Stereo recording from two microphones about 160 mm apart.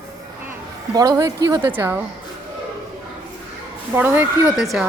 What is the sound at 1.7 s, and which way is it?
Speech, 10° right (ahead or behind).